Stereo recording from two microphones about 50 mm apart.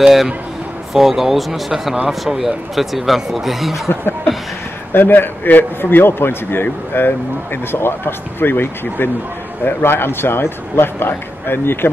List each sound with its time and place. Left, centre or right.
0.0 s speech: centre
4.9 s a man's voice: left